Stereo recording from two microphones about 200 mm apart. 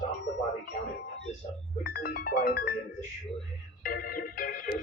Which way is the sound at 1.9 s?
50° left (ahead or behind).